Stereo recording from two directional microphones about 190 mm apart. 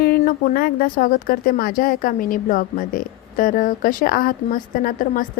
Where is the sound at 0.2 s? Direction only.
45° left (ahead or behind).